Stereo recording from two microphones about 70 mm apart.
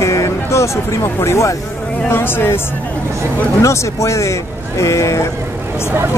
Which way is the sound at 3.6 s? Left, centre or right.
Left.